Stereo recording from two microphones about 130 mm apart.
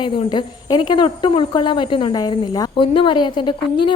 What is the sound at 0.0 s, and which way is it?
Speech, 35° left (ahead or behind).